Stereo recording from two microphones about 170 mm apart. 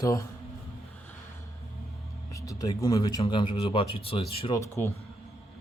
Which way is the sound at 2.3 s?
20° left (ahead or behind).